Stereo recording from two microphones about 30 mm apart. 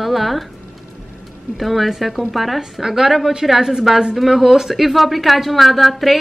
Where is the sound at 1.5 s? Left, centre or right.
Centre.